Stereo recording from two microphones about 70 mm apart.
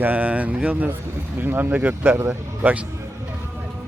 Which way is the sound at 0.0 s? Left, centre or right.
Right.